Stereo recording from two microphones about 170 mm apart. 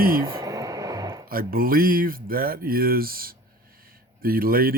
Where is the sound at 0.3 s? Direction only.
20° right (ahead or behind).